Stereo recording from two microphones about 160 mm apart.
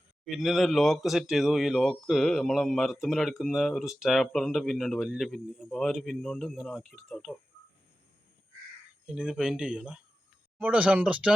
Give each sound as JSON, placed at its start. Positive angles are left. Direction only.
{"t": 0.3, "sound": "speech", "side_deg": 0}
{"t": 9.0, "sound": "speech", "side_deg": -5}